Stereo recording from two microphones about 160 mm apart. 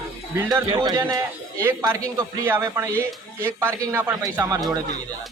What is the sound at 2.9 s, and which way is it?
Speech, 10° left (ahead or behind).